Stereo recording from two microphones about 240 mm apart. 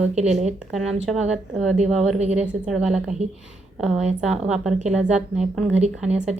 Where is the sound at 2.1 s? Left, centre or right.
Right.